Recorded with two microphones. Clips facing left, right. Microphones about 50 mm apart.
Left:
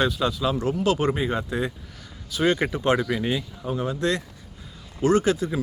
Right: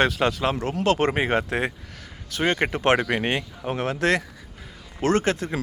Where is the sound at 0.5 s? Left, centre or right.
Right.